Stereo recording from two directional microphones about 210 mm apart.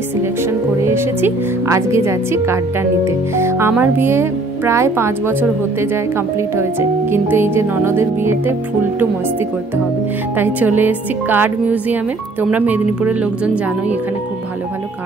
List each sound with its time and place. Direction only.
0.2 s speech: 10° right (ahead or behind)
10.3 s speech: 10° right (ahead or behind)